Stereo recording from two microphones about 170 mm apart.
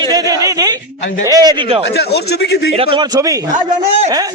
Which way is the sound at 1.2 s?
20° right (ahead or behind).